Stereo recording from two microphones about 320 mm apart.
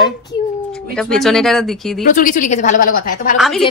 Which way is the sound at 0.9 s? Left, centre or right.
Centre.